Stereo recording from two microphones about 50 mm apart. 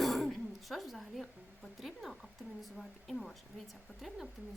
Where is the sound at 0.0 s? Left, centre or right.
Centre.